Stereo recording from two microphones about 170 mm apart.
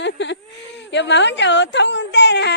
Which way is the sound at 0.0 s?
90° left.